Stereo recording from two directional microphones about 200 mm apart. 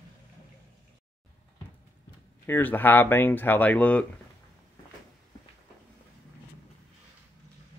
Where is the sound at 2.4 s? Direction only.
10° left (ahead or behind).